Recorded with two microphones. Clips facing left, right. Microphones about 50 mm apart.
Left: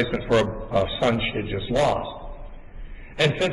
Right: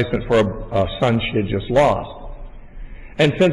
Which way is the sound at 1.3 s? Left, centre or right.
Right.